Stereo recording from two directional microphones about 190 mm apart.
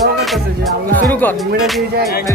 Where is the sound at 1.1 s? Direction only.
10° left (ahead or behind).